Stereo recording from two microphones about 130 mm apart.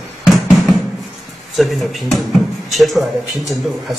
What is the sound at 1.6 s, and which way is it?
Speech, centre (ahead or behind).